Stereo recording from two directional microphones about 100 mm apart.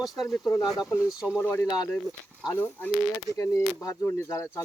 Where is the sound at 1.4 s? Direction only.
20° left (ahead or behind).